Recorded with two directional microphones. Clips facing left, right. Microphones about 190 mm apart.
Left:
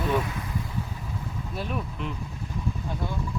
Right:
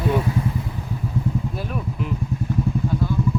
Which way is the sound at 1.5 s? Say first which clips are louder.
Right 4 dB; 5° right (ahead or behind).